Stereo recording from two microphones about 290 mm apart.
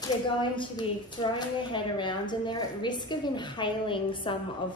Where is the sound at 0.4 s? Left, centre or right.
Centre.